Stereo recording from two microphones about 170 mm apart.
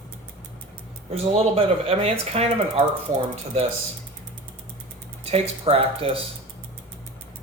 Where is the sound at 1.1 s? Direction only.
35° right (ahead or behind).